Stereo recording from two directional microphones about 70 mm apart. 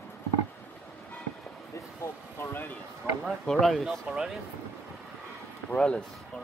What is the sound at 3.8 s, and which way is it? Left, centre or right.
Speech, centre.